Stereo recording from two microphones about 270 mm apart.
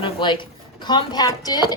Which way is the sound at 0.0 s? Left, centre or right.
Centre.